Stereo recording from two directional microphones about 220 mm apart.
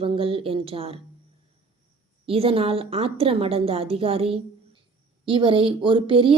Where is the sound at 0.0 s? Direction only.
25° right (ahead or behind).